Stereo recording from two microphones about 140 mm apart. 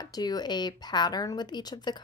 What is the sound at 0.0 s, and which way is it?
A woman's voice, 30° left (ahead or behind).